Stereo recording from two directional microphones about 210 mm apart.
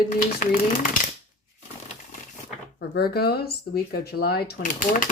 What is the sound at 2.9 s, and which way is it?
Speech, 50° left (ahead or behind).